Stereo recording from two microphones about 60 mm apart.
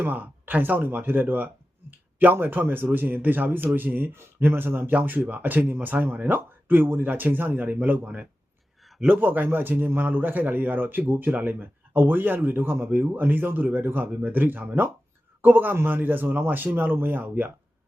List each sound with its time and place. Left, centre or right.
0.0 s speech: right
8.8 s a sound: centre
9.0 s speech: right